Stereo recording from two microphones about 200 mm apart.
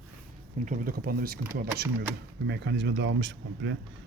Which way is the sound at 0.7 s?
45° right (ahead or behind).